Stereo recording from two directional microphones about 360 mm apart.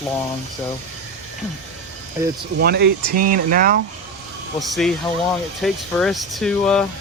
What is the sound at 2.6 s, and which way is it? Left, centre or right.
Speech, right.